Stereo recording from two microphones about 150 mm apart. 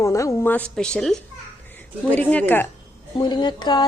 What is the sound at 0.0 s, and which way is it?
A woman's voice, 20° left (ahead or behind).